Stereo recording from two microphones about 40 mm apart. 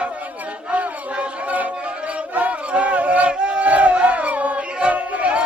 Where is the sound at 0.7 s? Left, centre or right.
Right.